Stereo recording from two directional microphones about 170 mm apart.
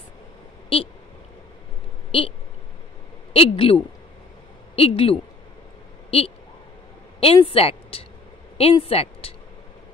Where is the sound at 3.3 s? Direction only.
30° left (ahead or behind).